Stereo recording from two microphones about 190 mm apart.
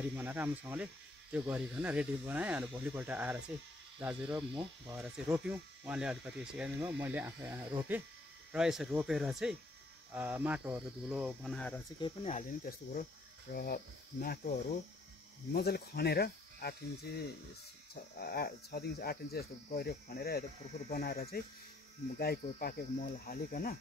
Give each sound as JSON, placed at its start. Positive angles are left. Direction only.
{"t": 0.1, "sound": "speech", "side_deg": -10}
{"t": 12.0, "sound": "speech", "side_deg": 35}
{"t": 15.5, "sound": "speech", "side_deg": 55}
{"t": 18.2, "sound": "speech", "side_deg": 55}